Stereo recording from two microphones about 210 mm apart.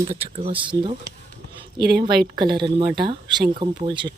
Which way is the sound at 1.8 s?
50° right (ahead or behind).